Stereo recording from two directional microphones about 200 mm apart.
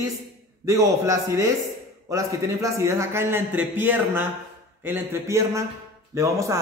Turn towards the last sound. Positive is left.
turn(degrees=-15)  # may be behind; listen again after turning